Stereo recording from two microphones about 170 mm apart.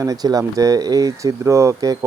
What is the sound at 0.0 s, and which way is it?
Speech, 20° right (ahead or behind).